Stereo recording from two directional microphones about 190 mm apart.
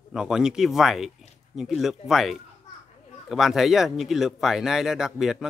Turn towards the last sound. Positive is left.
turn(degrees=0)  # may be behind; listen again after turning